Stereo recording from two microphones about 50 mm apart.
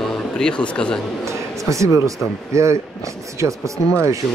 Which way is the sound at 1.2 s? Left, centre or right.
Right.